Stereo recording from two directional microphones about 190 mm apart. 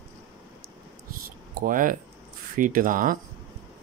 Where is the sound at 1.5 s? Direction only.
45° right (ahead or behind).